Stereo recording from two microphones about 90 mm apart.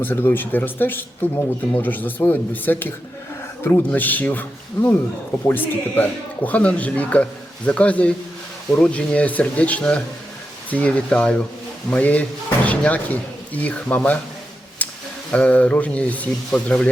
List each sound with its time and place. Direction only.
0.0 s speech: 20° left (ahead or behind)
14.8 s a sound: 15° left (ahead or behind)
15.3 s speech: 15° left (ahead or behind)